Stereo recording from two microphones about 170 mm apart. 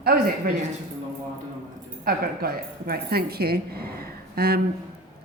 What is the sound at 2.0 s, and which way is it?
A woman's voice, 60° right (ahead or behind).